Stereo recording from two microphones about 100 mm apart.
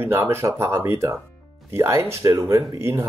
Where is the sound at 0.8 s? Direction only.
25° right (ahead or behind).